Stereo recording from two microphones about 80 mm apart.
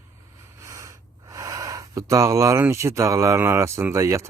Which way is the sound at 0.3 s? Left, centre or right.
Right.